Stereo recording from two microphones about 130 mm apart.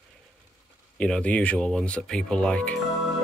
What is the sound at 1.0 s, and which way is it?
Speech, 10° left (ahead or behind).